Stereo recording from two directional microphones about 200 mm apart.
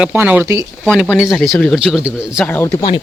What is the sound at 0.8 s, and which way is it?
Speech, 5° left (ahead or behind).